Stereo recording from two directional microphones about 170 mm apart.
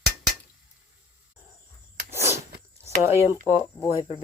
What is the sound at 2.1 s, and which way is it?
Sneeze, 15° right (ahead or behind).